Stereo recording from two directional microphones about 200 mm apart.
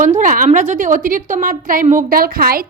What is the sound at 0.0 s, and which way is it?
A woman's voice, 40° right (ahead or behind).